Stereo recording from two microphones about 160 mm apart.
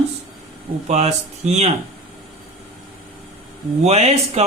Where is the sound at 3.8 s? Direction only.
40° right (ahead or behind).